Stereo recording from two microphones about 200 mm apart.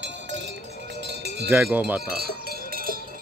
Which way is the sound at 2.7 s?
45° right (ahead or behind).